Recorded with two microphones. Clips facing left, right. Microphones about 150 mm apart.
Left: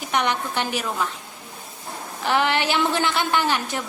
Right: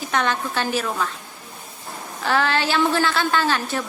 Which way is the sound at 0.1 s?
15° left (ahead or behind).